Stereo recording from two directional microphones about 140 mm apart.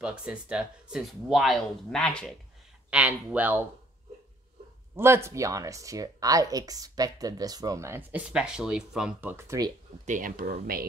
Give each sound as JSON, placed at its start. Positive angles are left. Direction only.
{"t": 0.0, "sound": "speech", "side_deg": -5}
{"t": 2.9, "sound": "speech", "side_deg": -10}
{"t": 4.9, "sound": "speech", "side_deg": -20}
{"t": 10.0, "sound": "speech", "side_deg": -75}